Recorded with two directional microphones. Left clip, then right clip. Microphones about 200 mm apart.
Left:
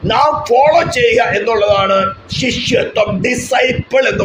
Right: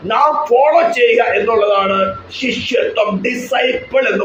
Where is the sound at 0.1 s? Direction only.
55° left (ahead or behind).